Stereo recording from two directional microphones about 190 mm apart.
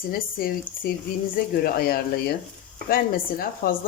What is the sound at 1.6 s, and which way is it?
Speech, 50° left (ahead or behind).